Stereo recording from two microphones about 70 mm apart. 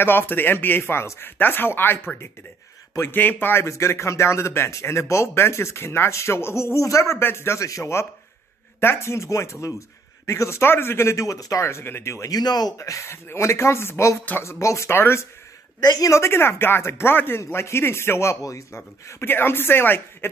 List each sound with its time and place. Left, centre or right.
0.0 s a man's voice: left
3.6 s speech: left
11.6 s speech: left
12.3 s speech: left
12.7 s speech: left
15.8 s speech: left
16.1 s speech: left
18.4 s speech: left
19.2 s speech: left